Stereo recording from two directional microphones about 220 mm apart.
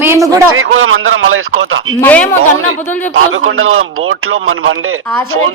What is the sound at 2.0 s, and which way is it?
Speech, 10° left (ahead or behind).